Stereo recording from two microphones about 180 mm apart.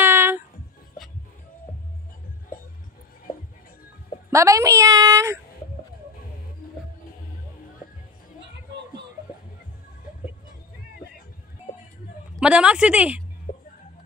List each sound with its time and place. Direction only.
0.0 s a sound: 15° right (ahead or behind)
2.5 s music: 50° left (ahead or behind)
4.3 s a woman's voice: 15° right (ahead or behind)
12.4 s a woman's voice: 5° right (ahead or behind)
13.5 s music: 50° left (ahead or behind)